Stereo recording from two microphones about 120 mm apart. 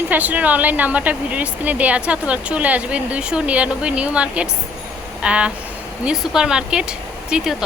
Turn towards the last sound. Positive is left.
turn(degrees=-5)  # may be behind; listen again after turning